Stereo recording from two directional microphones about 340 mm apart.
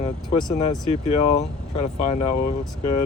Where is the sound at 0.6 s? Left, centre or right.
Centre.